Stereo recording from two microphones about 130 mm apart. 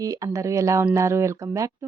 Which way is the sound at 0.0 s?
25° right (ahead or behind).